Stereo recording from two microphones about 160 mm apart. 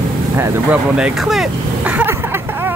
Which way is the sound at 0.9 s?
5° right (ahead or behind).